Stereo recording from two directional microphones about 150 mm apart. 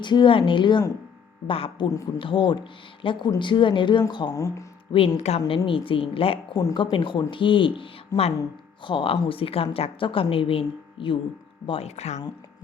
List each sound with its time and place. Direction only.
0.0 s speech: 30° left (ahead or behind)
4.9 s speech: 40° left (ahead or behind)
6.6 s speech: 25° left (ahead or behind)
6.9 s speech: 35° left (ahead or behind)